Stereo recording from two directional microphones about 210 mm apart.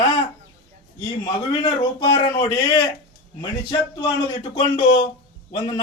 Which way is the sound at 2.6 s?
20° left (ahead or behind).